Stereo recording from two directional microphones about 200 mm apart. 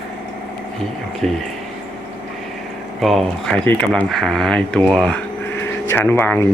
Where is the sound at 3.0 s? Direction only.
5° left (ahead or behind).